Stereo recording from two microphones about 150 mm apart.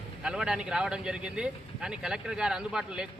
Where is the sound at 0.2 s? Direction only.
5° right (ahead or behind).